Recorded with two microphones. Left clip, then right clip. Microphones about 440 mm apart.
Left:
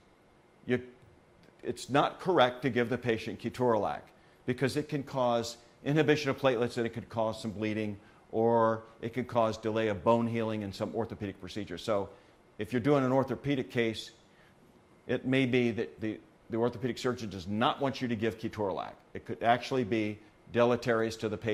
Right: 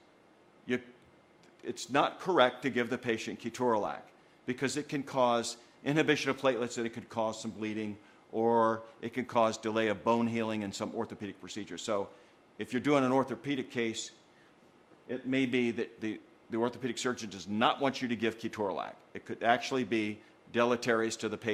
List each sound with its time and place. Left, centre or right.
0.7 s speech: left
15.3 s speech: left